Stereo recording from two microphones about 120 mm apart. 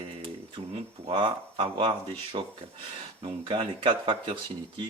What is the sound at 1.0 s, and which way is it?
Speech, 45° right (ahead or behind).